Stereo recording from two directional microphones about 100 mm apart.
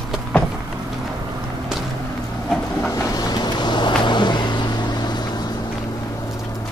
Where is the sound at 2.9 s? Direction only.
40° left (ahead or behind).